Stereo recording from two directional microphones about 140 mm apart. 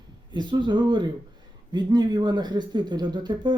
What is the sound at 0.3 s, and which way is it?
Speech, 35° right (ahead or behind).